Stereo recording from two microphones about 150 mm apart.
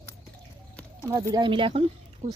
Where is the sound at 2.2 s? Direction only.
55° right (ahead or behind).